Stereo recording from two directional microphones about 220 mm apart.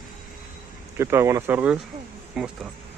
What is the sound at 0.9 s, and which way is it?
Speech, 10° right (ahead or behind).